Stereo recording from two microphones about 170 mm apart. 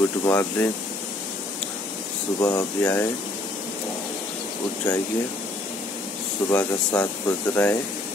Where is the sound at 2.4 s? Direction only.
20° left (ahead or behind).